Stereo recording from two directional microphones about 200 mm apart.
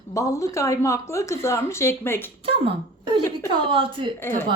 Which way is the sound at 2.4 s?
25° right (ahead or behind).